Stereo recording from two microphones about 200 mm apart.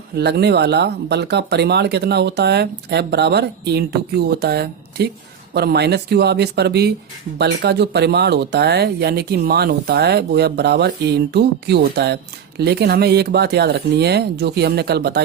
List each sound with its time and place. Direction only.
0.2 s speech: 55° right (ahead or behind)